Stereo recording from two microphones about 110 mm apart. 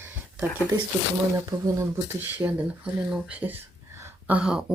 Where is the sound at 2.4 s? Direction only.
15° right (ahead or behind).